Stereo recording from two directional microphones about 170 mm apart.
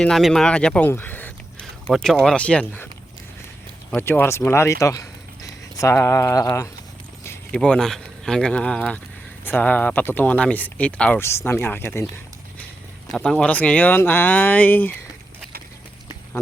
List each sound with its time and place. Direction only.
0.0 s speech: centre (ahead or behind)
3.9 s speech: 10° left (ahead or behind)
7.5 s speech: 5° left (ahead or behind)